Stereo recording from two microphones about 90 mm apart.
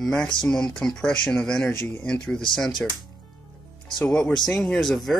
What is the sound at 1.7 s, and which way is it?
Speech, 20° left (ahead or behind).